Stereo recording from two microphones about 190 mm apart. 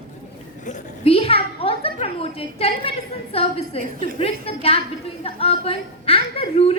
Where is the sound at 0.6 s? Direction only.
40° left (ahead or behind).